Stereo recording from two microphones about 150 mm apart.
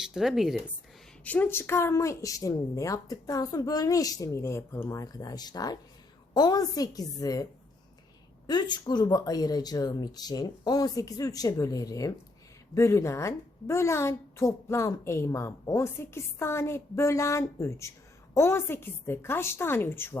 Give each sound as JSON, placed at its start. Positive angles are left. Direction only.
{"t": 0.0, "sound": "speech", "side_deg": -5}
{"t": 1.2, "sound": "a woman's voice", "side_deg": 10}
{"t": 8.4, "sound": "a woman's voice", "side_deg": 30}